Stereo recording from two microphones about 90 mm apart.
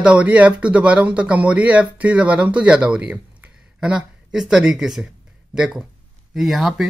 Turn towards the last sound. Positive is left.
turn(degrees=-5)  # may be behind; listen again after turning